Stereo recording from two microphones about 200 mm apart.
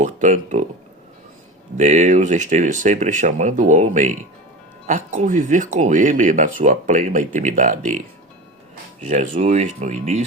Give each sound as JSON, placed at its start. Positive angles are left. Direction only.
{"t": 0.0, "sound": "speech", "side_deg": -35}
{"t": 1.8, "sound": "speech", "side_deg": -35}
{"t": 9.0, "sound": "speech", "side_deg": -40}